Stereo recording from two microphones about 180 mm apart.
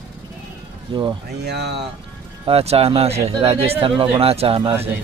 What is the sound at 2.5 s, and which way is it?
Speech, 35° right (ahead or behind).